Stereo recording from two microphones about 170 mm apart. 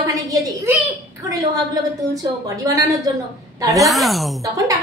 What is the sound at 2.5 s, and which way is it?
Speech, 20° right (ahead or behind).